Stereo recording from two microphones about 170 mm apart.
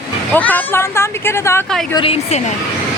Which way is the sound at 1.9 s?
35° left (ahead or behind).